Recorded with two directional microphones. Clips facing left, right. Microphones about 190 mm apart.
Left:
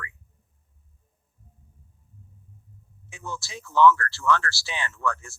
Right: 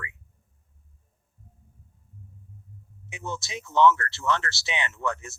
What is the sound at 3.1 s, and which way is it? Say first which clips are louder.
Speech: right 2 dB; 20° right (ahead or behind).